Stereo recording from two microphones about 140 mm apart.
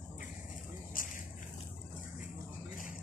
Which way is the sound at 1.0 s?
80° left.